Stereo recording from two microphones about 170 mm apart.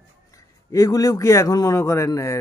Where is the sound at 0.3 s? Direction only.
20° left (ahead or behind).